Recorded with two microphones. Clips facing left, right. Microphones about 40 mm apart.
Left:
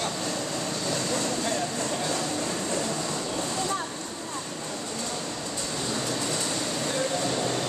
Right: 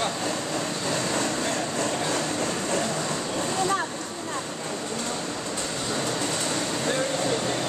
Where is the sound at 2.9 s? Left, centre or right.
Right.